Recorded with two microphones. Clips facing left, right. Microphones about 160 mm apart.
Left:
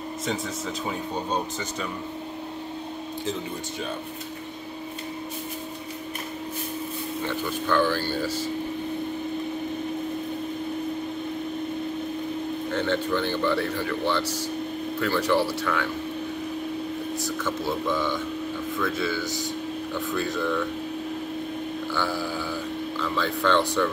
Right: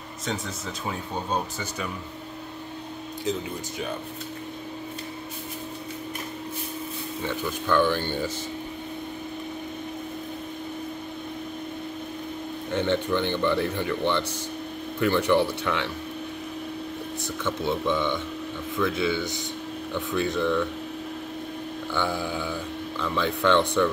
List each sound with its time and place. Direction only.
0.8 s speech: 5° right (ahead or behind)
7.7 s speech: 20° right (ahead or behind)
12.7 s speech: 20° right (ahead or behind)
15.0 s speech: 20° right (ahead or behind)
17.5 s speech: 5° left (ahead or behind)
17.9 s speech: 20° right (ahead or behind)
21.9 s speech: 20° right (ahead or behind)